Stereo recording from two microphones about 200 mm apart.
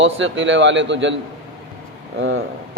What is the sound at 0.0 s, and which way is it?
A man's voice, 70° right (ahead or behind).